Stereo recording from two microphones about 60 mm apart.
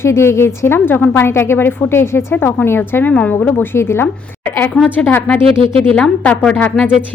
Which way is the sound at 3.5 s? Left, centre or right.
Left.